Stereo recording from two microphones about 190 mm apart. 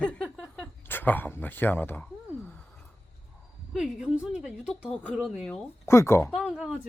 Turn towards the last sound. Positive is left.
turn(degrees=0)  # may be behind; listen again after turning